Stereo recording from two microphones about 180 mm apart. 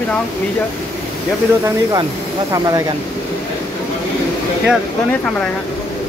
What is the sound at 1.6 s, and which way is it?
Speech, 20° right (ahead or behind).